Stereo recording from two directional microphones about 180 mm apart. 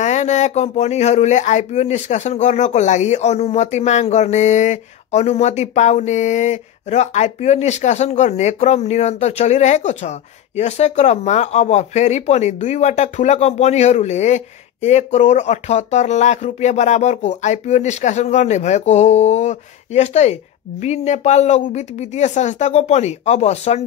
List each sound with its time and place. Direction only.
0.0 s speech: 40° left (ahead or behind)